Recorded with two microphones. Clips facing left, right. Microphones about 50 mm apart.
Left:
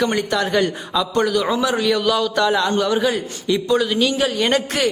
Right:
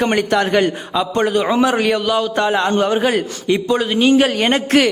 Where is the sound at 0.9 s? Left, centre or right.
Right.